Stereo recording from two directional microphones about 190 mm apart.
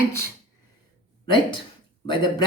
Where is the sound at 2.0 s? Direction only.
25° left (ahead or behind).